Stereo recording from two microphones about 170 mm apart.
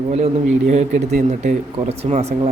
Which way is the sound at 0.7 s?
40° right (ahead or behind).